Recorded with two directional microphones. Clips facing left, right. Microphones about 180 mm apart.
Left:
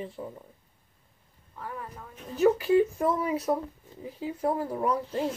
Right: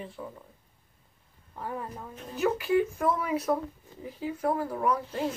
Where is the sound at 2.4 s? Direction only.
35° left (ahead or behind).